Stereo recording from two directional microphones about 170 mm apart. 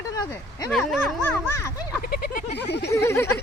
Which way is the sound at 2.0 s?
65° left (ahead or behind).